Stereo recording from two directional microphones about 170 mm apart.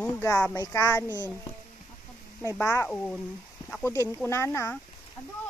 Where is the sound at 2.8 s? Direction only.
5° left (ahead or behind).